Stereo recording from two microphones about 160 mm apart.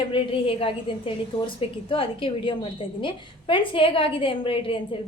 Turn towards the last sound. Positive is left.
turn(degrees=35)  # may be behind; listen again after turning